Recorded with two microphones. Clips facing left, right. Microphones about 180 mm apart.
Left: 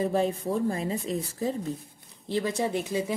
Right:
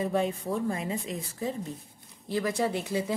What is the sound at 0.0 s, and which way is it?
Speech, 35° left (ahead or behind).